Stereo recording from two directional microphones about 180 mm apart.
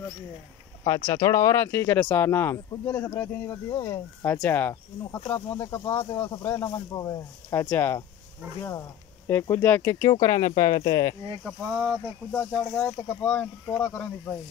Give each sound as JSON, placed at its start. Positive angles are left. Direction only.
{"t": 0.8, "sound": "speech", "side_deg": 15}
{"t": 9.3, "sound": "speech", "side_deg": 15}
{"t": 11.4, "sound": "speech", "side_deg": -5}
{"t": 12.3, "sound": "speech", "side_deg": 10}